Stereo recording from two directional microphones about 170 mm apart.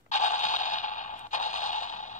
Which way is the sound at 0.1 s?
45° left (ahead or behind).